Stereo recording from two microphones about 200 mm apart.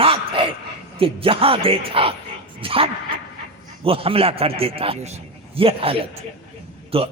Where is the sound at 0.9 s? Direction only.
25° right (ahead or behind).